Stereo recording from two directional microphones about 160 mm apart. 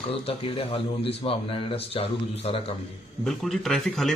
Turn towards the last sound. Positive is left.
turn(degrees=0)  # may be behind; listen again after turning